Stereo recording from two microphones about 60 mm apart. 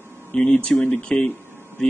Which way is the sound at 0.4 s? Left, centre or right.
Centre.